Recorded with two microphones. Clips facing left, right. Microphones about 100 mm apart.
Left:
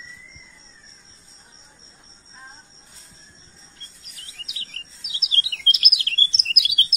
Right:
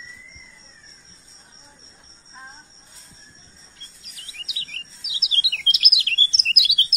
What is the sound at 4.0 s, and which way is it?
Chirp, 40° left (ahead or behind).